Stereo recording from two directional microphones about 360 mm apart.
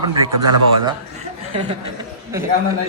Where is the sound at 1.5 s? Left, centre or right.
Centre.